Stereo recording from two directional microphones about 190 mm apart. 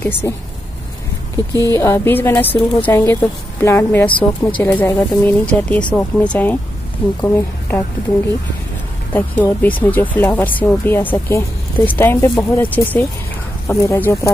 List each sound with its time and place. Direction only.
0.2 s speech: 15° left (ahead or behind)
1.7 s speech: 15° left (ahead or behind)
9.1 s speech: 10° left (ahead or behind)